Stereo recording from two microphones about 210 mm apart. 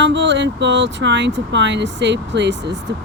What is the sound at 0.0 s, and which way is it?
Speech, 60° right (ahead or behind).